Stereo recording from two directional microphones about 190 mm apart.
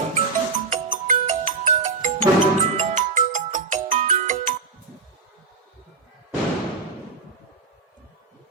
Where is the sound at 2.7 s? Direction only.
40° right (ahead or behind).